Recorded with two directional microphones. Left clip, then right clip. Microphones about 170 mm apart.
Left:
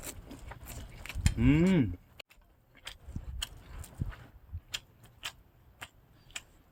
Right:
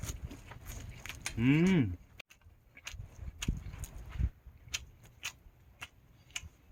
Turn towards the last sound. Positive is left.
turn(degrees=20)  # may be behind; listen again after turning